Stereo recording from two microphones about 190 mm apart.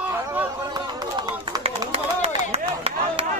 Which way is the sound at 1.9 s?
35° right (ahead or behind).